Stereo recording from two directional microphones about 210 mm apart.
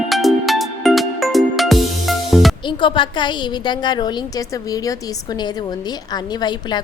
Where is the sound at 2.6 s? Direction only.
25° left (ahead or behind).